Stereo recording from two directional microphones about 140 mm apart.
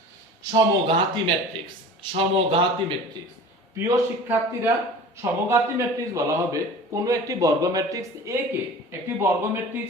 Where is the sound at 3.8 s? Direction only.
20° right (ahead or behind).